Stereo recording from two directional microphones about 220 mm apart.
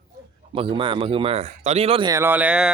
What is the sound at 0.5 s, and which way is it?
Speech, 25° right (ahead or behind).